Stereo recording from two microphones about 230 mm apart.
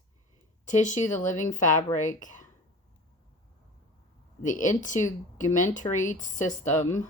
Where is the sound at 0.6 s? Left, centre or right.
Left.